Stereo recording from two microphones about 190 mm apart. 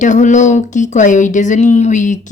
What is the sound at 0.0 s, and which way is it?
A woman's voice, 40° left (ahead or behind).